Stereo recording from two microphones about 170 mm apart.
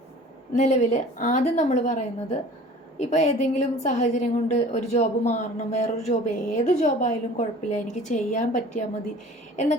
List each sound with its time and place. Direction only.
0.5 s a woman's voice: 45° left (ahead or behind)